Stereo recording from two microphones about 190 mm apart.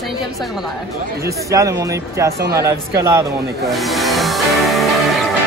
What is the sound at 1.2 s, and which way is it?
Speech, 15° right (ahead or behind).